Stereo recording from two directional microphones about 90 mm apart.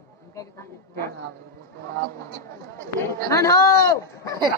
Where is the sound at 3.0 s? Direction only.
35° left (ahead or behind).